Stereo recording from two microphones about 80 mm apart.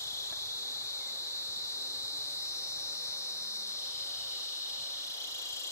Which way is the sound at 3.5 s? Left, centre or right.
Left.